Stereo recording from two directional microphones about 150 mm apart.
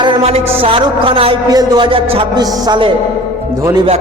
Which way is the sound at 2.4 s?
25° right (ahead or behind).